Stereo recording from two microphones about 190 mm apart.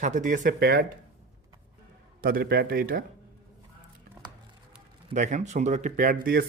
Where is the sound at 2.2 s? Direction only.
50° right (ahead or behind).